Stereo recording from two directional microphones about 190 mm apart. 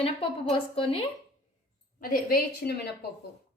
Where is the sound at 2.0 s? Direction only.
50° left (ahead or behind).